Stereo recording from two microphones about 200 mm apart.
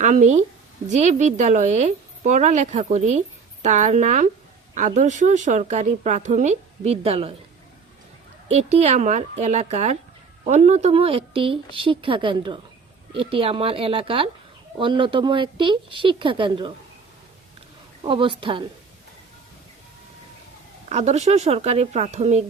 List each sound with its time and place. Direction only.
0.0 s speech: 35° right (ahead or behind)
8.4 s speech: 35° right (ahead or behind)
18.0 s speech: 25° right (ahead or behind)
20.9 s speech: 35° right (ahead or behind)